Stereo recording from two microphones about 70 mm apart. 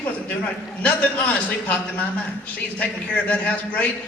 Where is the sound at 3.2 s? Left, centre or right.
Left.